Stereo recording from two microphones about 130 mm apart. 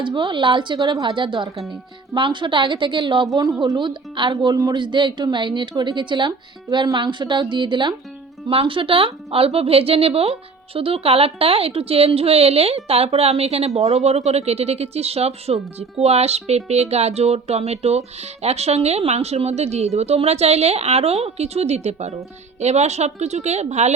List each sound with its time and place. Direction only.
0.0 s a woman's voice: 40° right (ahead or behind); by 23.9 s 60° right (ahead or behind)